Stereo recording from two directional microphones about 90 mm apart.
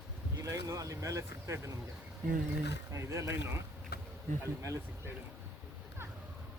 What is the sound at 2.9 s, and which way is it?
Speech, 35° right (ahead or behind).